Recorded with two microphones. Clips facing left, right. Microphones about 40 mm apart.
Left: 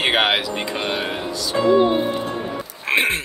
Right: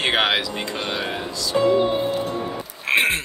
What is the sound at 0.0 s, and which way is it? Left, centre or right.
Speech, centre.